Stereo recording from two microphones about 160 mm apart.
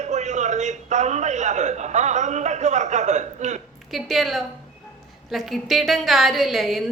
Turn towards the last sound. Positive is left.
turn(degrees=0)  # may be behind; listen again after turning